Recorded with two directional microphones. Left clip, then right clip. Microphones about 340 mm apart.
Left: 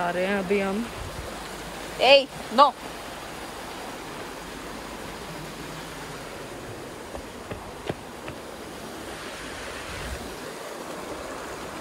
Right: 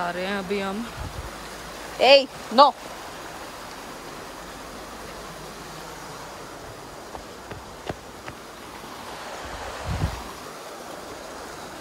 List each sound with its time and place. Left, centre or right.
0.0 s speech: centre
2.0 s speech: centre